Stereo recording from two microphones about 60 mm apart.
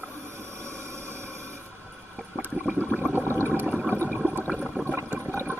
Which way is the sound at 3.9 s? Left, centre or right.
Left.